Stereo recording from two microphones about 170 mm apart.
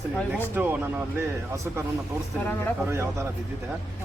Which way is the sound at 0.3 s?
10° right (ahead or behind).